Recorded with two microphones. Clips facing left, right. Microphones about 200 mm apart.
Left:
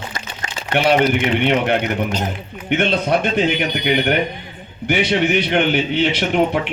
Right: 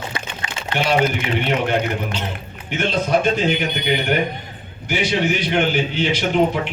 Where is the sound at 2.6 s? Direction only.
60° left (ahead or behind).